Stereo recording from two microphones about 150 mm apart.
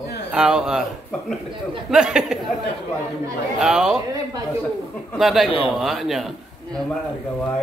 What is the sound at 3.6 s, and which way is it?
Speech, 5° right (ahead or behind).